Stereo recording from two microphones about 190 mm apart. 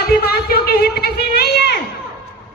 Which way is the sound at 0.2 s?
55° left (ahead or behind).